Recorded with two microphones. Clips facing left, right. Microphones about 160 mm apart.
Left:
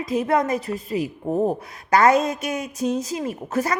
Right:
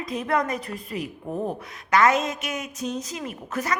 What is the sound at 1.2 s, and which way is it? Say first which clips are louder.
A woman's voice: left 8 dB; 40° left (ahead or behind).